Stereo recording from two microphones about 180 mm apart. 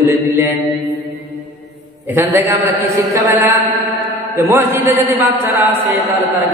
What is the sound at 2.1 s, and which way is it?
Mantra, 15° right (ahead or behind).